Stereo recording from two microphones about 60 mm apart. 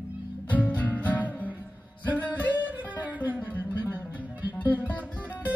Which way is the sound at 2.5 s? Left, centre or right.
Right.